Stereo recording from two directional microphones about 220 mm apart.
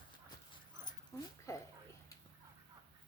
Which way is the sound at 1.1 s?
15° left (ahead or behind).